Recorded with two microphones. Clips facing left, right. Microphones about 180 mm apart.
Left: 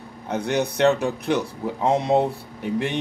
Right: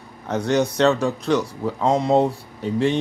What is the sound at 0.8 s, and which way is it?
Speech, 15° left (ahead or behind).